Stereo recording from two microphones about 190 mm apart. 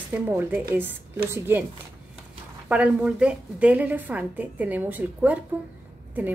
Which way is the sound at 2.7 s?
5° right (ahead or behind).